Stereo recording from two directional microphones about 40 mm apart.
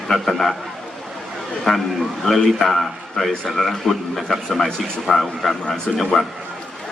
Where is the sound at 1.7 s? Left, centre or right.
Centre.